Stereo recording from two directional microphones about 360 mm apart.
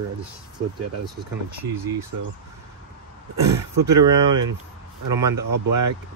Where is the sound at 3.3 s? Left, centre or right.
Right.